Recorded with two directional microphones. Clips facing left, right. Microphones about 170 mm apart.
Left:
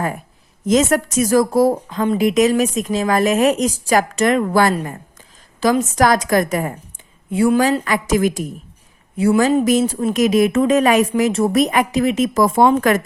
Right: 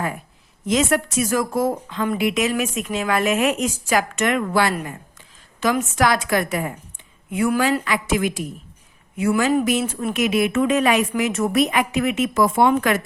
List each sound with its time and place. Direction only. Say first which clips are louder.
0.6 s a woman's voice: left 4 dB; 40° left (ahead or behind)
7.3 s a woman's voice: left 5 dB; 30° left (ahead or behind)
7.9 s a woman's voice: left 4 dB; 45° left (ahead or behind); by 9.6 s 25° left (ahead or behind)
9.6 s a woman's voice: left 6 dB; 35° left (ahead or behind)
11.1 s a woman's voice: left 5 dB; 30° left (ahead or behind)